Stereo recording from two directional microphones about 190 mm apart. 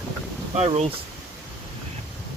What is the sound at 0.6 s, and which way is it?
Speech, 35° right (ahead or behind).